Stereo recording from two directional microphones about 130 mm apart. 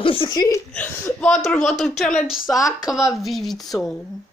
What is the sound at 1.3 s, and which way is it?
Speech, 5° left (ahead or behind).